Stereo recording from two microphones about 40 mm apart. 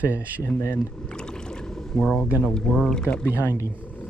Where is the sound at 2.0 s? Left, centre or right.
Centre.